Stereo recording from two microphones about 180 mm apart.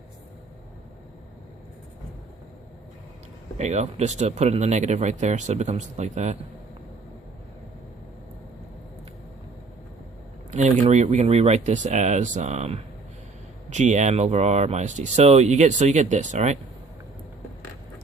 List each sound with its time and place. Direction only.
3.6 s speech: 40° right (ahead or behind)
10.5 s speech: 40° right (ahead or behind)